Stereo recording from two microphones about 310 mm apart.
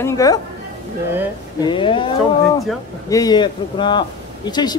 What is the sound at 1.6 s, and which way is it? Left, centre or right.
Speech, centre.